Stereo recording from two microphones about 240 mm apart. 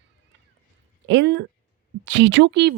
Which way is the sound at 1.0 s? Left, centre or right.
Right.